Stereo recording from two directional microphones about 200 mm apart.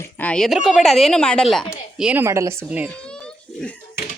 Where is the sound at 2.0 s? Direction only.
10° right (ahead or behind).